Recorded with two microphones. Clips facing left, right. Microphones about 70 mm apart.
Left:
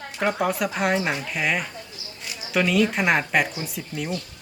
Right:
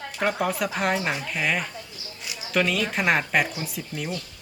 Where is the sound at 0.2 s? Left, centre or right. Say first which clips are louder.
Left 2 dB; centre.